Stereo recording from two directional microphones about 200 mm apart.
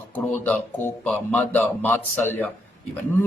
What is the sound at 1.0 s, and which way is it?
A man's voice, 10° left (ahead or behind).